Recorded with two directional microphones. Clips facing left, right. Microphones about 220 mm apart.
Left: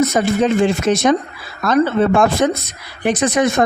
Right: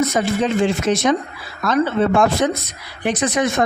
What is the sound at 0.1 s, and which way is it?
A woman's voice, 45° left (ahead or behind).